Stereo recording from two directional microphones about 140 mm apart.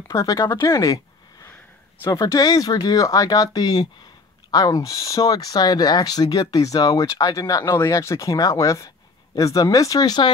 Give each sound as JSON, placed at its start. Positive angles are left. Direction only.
{"t": 0.1, "sound": "speech", "side_deg": 25}